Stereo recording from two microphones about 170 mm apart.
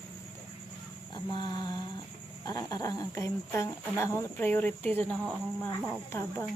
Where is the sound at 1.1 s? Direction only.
25° left (ahead or behind).